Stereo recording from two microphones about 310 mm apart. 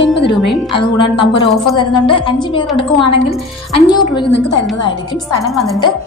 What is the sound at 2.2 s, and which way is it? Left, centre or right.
Speech, centre.